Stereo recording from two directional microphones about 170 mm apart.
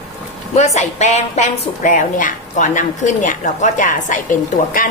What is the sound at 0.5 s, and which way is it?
A woman's voice, 45° left (ahead or behind).